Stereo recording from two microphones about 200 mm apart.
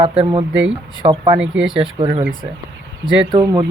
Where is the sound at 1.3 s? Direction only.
5° right (ahead or behind).